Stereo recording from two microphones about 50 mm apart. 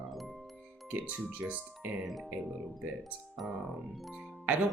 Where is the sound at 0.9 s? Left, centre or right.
Right.